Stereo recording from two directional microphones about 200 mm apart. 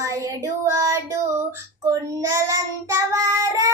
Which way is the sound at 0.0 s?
15° right (ahead or behind).